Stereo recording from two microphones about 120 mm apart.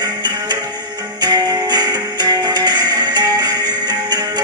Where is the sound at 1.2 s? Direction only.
35° right (ahead or behind).